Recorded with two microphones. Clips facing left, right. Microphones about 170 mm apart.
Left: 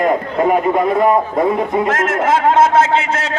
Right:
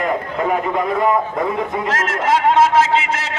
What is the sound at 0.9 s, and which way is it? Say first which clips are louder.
Speech: left 4 dB; 30° left (ahead or behind).